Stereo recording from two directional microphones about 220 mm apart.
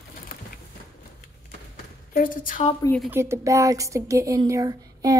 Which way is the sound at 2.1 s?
40° left (ahead or behind).